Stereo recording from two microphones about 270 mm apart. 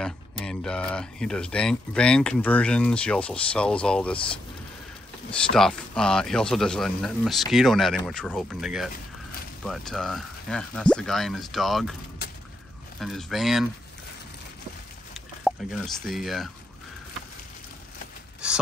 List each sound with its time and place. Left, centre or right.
0.5 s speech: centre
5.3 s speech: centre
13.0 s speech: centre
15.1 s speech: centre
18.4 s speech: centre